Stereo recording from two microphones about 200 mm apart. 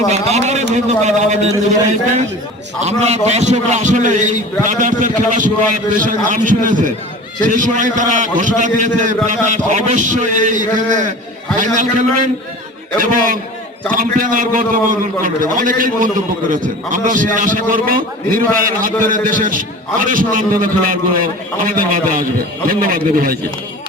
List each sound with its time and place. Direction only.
0.1 s a man's voice: 35° right (ahead or behind)
2.8 s a man's voice: 35° right (ahead or behind)